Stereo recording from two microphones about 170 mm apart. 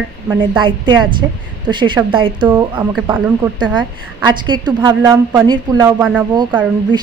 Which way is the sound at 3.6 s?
25° right (ahead or behind).